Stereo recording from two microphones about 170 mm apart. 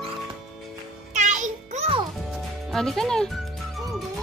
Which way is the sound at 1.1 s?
45° right (ahead or behind).